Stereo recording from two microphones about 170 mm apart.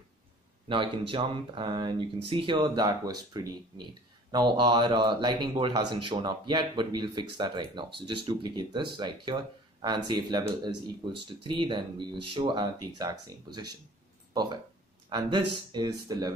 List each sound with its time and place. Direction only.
0.7 s speech: 30° right (ahead or behind)